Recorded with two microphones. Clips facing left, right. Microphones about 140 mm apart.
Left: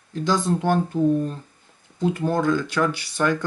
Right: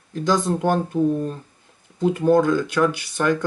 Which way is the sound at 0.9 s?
15° right (ahead or behind).